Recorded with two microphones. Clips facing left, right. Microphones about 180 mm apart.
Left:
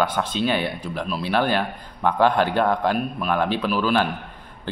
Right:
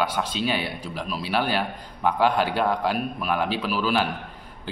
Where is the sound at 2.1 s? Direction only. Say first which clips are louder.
Left 3 dB; 10° right (ahead or behind).